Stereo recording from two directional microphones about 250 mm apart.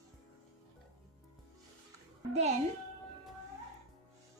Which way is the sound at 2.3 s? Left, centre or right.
Right.